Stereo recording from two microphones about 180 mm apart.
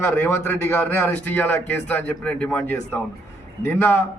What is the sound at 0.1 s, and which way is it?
A man's voice, 10° left (ahead or behind).